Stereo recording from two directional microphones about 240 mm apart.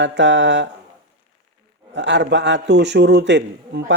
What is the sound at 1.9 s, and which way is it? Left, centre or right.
Speech, right.